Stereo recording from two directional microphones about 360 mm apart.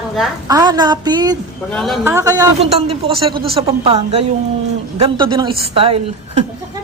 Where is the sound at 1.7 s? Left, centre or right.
Centre.